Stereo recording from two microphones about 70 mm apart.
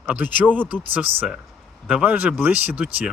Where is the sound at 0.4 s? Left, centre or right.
Centre.